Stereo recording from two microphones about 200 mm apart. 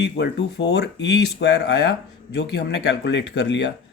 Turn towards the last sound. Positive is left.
turn(degrees=60)  # may be behind; listen again after turning